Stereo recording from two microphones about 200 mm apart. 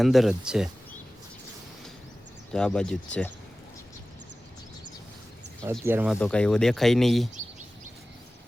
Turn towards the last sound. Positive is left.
turn(degrees=-35)  # may be behind; listen again after turning